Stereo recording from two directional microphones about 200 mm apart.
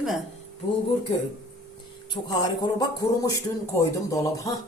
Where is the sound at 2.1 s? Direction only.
20° left (ahead or behind).